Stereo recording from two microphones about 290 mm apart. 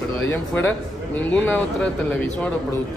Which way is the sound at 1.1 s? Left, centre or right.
Centre.